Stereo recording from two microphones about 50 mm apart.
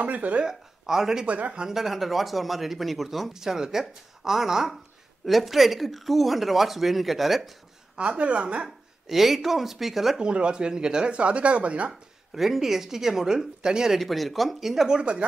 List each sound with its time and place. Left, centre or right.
0.0 s speech: right
0.5 s speech: centre
1.2 s speech: right
1.7 s speech: centre
8.0 s speech: right
8.6 s speech: centre
10.2 s speech: centre
12.4 s speech: centre
13.9 s speech: centre
15.0 s speech: right